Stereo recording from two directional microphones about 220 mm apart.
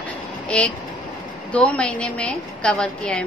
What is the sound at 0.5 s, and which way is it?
A woman's voice, 5° left (ahead or behind).